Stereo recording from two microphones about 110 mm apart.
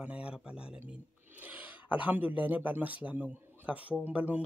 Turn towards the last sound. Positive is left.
turn(degrees=-15)  # may be behind; listen again after turning